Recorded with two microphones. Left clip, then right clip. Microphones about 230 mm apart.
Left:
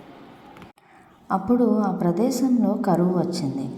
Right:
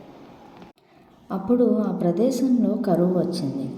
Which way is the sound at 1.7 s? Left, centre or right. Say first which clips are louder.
Even; centre.